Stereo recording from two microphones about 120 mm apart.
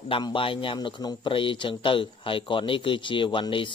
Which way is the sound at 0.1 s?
45° left (ahead or behind).